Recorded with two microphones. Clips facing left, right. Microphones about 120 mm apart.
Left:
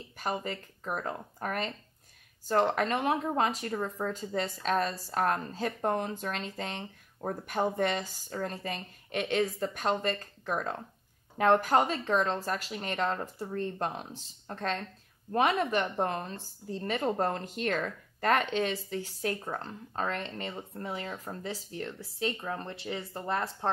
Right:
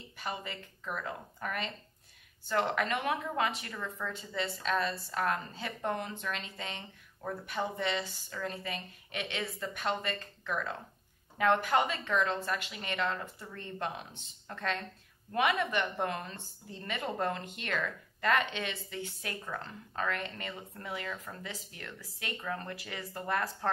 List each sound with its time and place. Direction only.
0.2 s speech: 45° left (ahead or behind); by 23.7 s 25° left (ahead or behind)